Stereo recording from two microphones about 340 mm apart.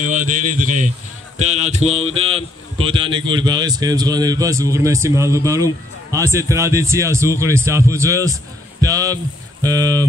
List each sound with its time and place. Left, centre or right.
0.0 s speech: right
8.8 s hum: centre